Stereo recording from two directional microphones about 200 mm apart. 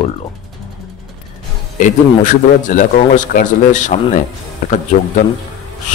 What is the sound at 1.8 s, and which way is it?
A man's voice, 40° left (ahead or behind).